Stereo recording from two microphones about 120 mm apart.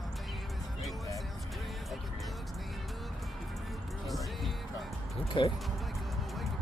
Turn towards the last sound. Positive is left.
turn(degrees=45)  # may be behind; listen again after turning